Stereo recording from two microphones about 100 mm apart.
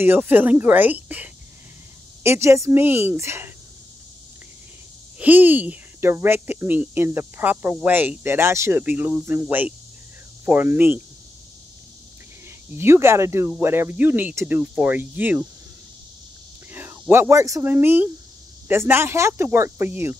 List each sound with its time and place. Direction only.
0.0 s a woman's voice: 20° right (ahead or behind)
2.2 s speech: 30° right (ahead or behind)
5.2 s speech: 20° right (ahead or behind)
12.7 s a woman's voice: 25° right (ahead or behind)
16.7 s a sound: 20° right (ahead or behind)
17.1 s speech: 25° right (ahead or behind)